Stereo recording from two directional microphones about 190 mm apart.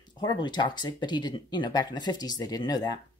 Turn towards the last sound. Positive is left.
turn(degrees=20)  # may be behind; listen again after turning